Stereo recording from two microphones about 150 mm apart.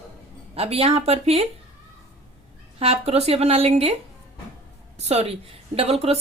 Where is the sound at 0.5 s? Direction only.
40° right (ahead or behind).